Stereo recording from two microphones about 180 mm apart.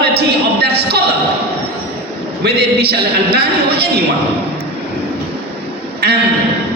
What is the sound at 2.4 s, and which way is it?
Speech, 60° right (ahead or behind).